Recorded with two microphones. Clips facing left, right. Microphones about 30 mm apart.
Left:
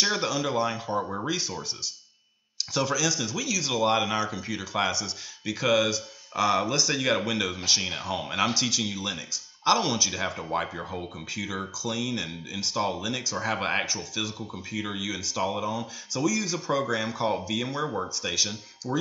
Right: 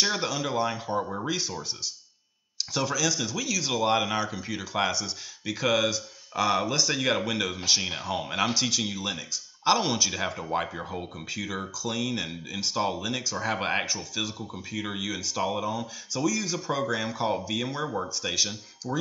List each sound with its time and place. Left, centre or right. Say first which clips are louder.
0.0 s speech: left 1 dB; centre
2.7 s speech: left 1 dB; centre
18.8 s speech: left 2 dB; centre